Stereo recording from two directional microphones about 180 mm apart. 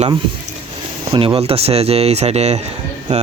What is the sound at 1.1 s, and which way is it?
Speech, 30° right (ahead or behind).